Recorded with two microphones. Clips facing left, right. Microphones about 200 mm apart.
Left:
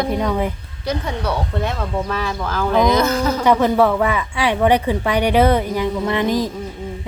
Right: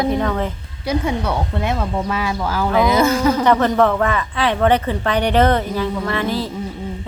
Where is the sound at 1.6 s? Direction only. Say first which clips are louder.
Right 2 dB; 10° right (ahead or behind).